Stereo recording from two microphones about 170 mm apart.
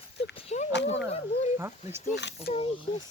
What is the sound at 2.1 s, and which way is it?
Speech, 90° left.